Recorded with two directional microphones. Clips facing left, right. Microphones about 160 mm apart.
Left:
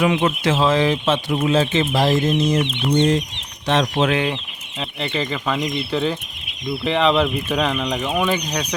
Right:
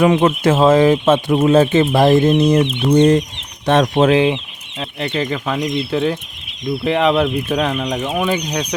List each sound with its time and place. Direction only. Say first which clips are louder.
0.0 s speech: right 5 dB; 45° right (ahead or behind)
3.7 s speech: right 5 dB; 55° right (ahead or behind)
4.1 s speech: right 7 dB; 20° right (ahead or behind)
4.8 s speech: right 3 dB; centre (ahead or behind)